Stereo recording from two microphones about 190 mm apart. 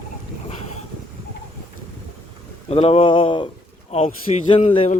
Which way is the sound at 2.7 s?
30° left (ahead or behind).